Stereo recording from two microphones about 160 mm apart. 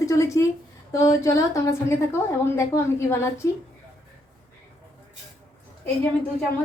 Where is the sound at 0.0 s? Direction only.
20° left (ahead or behind).